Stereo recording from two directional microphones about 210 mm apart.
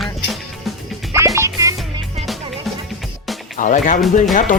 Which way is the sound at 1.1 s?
15° right (ahead or behind).